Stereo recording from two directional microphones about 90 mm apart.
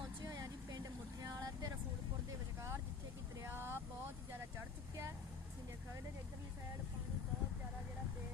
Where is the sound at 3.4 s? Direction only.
25° right (ahead or behind).